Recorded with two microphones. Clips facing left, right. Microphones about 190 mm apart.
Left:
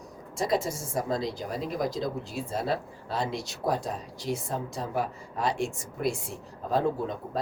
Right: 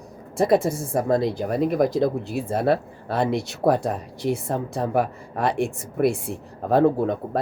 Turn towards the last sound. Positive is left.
turn(degrees=-60)  # may be behind; listen again after turning